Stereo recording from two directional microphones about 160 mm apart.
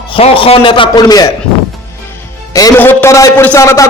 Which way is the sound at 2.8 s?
15° left (ahead or behind).